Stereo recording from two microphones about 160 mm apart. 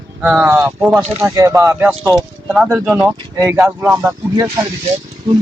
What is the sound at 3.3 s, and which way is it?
Speech, 20° right (ahead or behind).